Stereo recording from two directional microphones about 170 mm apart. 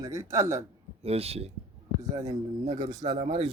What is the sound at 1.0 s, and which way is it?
Speech, 35° right (ahead or behind).